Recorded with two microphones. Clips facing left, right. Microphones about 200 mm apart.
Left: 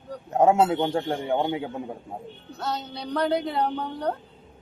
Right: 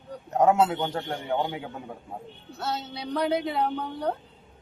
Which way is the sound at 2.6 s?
Centre (ahead or behind).